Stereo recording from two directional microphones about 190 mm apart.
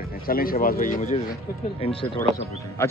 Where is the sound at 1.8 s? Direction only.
30° left (ahead or behind).